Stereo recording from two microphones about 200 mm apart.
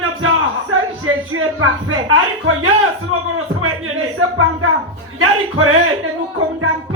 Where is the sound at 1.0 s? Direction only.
90° right.